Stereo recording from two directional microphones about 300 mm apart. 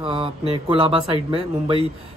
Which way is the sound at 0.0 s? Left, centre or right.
Centre.